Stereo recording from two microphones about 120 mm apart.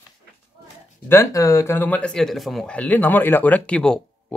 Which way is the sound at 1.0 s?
25° left (ahead or behind).